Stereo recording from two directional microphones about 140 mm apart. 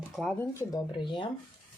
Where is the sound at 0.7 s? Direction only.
35° left (ahead or behind).